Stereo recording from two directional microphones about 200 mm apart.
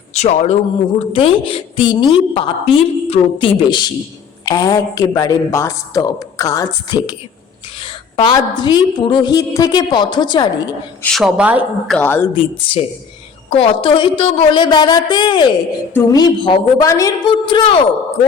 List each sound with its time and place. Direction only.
0.1 s a woman's voice: 35° left (ahead or behind)
11.0 s a woman's voice: centre (ahead or behind)
11.9 s speech: 10° left (ahead or behind)
12.7 s a woman's voice: 25° left (ahead or behind)